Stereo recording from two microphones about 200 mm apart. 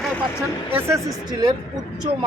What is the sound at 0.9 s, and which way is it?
Speech, 20° right (ahead or behind).